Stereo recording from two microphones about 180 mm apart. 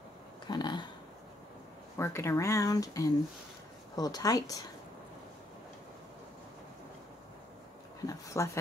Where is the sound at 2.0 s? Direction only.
15° left (ahead or behind).